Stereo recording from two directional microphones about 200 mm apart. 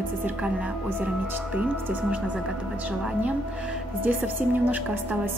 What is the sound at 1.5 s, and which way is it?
Speech, 5° right (ahead or behind).